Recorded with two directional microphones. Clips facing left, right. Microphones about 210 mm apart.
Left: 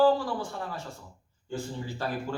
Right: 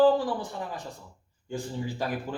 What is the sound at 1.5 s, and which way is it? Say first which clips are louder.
Speech: even; 15° right (ahead or behind).